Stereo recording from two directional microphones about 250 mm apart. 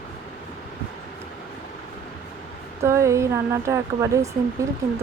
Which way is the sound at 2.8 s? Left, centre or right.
Centre.